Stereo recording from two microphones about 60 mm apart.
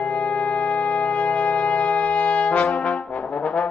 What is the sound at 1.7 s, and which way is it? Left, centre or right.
Wind instrument, centre.